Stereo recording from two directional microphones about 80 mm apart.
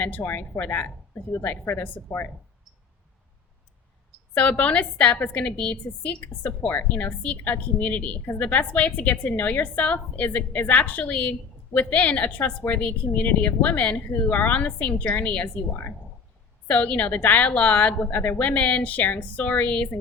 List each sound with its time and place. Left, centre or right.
0.0 s a woman's voice: centre
4.4 s a woman's voice: centre
16.6 s a woman's voice: centre